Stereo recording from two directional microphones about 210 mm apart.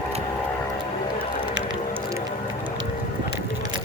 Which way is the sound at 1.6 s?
60° right (ahead or behind).